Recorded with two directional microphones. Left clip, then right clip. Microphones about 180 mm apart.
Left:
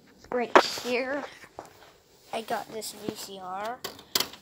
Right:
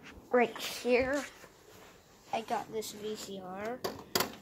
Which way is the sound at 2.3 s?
20° left (ahead or behind).